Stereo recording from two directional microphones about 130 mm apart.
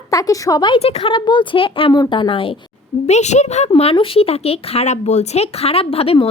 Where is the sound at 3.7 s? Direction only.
45° left (ahead or behind).